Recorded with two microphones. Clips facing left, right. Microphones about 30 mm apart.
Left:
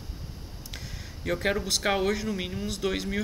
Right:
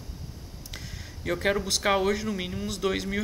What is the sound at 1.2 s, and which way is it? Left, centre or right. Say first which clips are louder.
Speech: right 1 dB; centre.